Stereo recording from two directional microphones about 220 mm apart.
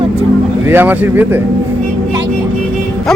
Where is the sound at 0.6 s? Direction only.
10° right (ahead or behind).